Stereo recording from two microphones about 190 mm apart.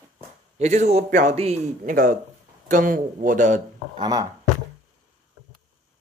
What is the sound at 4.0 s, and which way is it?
Speech, 20° right (ahead or behind).